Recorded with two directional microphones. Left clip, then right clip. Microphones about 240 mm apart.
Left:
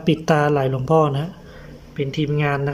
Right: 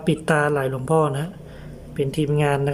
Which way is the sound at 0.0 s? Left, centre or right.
Centre.